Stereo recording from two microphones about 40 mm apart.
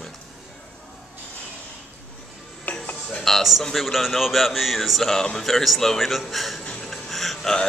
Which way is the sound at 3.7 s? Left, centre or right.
Centre.